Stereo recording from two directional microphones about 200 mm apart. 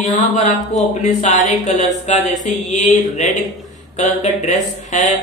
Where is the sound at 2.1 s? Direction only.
35° left (ahead or behind).